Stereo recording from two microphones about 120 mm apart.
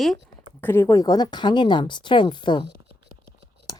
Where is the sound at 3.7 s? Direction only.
30° left (ahead or behind).